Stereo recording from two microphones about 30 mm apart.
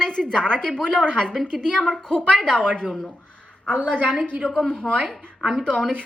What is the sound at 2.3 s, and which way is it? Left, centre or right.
Speech, centre.